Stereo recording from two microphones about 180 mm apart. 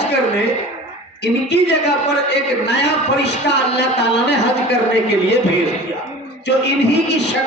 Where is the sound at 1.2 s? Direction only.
70° left (ahead or behind).